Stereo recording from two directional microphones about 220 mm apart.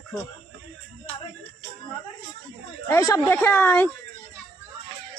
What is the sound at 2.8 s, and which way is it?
Speech, 15° left (ahead or behind).